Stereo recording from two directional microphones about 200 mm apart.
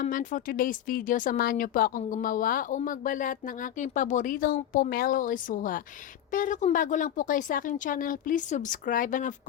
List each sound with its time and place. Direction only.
0.0 s a woman's voice: 40° left (ahead or behind)